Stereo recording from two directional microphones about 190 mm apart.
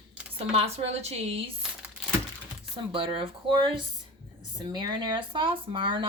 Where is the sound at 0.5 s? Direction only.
35° right (ahead or behind).